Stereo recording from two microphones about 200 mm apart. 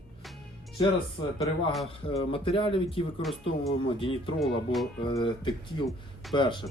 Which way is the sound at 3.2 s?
Centre (ahead or behind).